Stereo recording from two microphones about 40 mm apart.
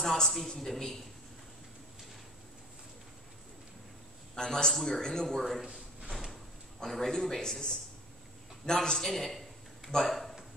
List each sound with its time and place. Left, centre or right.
0.0 s a man's voice: centre
4.4 s a man's voice: centre
5.4 s a man's voice: centre
5.7 s drawer open or close: right
6.8 s a man's voice: centre
8.6 s a man's voice: centre